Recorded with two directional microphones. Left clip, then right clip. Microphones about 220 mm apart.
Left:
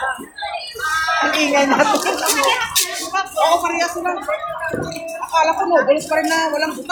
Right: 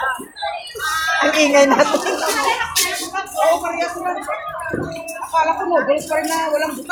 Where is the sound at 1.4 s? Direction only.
40° right (ahead or behind).